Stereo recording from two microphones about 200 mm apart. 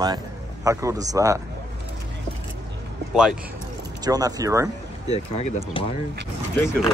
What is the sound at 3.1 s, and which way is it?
Speech, 5° right (ahead or behind).